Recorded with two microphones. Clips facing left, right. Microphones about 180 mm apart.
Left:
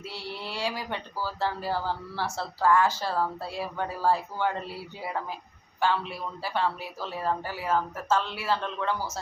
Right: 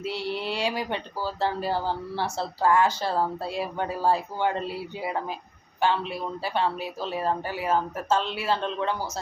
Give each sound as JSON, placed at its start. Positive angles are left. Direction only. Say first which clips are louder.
{"t": 0.0, "sound": "speech", "louder": "right 8 dB", "side_deg": -20}